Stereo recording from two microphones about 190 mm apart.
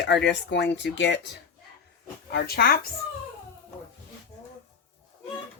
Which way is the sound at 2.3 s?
55° left (ahead or behind).